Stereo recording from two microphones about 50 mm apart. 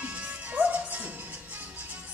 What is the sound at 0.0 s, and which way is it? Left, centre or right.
Music, right.